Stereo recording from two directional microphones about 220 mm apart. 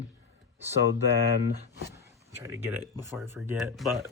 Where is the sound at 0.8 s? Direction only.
50° left (ahead or behind).